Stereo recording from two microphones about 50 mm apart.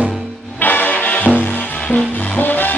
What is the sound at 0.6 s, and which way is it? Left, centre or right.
Music, left.